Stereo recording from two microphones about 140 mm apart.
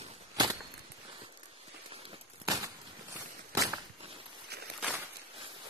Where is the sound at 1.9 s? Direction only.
40° right (ahead or behind).